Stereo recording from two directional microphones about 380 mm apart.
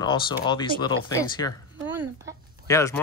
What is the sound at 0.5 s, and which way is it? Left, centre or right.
Speech, centre.